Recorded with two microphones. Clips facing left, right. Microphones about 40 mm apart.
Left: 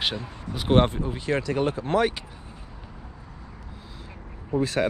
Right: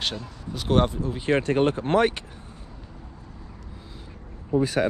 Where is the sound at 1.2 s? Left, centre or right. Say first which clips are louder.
Right 4 dB; right.